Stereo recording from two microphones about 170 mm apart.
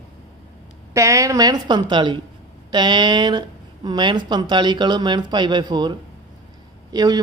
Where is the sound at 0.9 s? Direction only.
20° right (ahead or behind).